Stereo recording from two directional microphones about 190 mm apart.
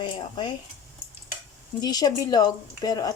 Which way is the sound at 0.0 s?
25° left (ahead or behind).